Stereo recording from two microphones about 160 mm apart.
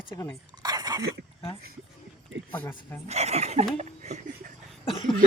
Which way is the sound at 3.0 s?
45° right (ahead or behind).